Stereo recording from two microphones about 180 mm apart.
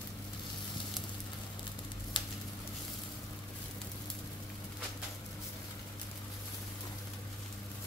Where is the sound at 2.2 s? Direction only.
25° left (ahead or behind).